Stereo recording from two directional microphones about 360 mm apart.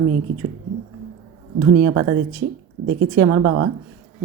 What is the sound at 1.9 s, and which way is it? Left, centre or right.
Speech, right.